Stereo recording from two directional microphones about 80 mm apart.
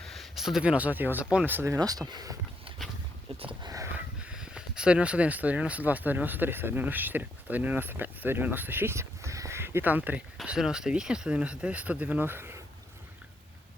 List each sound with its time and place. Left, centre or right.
0.0 s speech: centre; by 1.2 s right
1.2 s speech: centre
1.8 s speech: right
2.8 s a sound: centre
3.9 s speech: centre
10.4 s speech: centre; by 12.5 s right